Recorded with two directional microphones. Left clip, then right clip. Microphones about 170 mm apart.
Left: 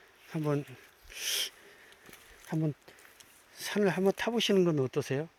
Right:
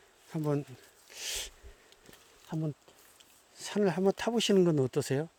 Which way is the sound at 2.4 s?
15° left (ahead or behind).